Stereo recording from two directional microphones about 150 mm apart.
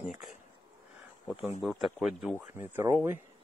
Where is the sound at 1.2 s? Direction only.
10° right (ahead or behind).